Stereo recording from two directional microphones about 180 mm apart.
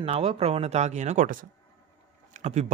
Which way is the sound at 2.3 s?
40° right (ahead or behind).